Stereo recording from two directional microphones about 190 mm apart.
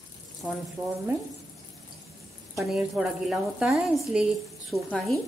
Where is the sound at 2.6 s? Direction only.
Centre (ahead or behind).